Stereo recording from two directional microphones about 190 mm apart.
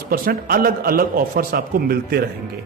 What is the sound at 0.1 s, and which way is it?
Speech, 50° right (ahead or behind).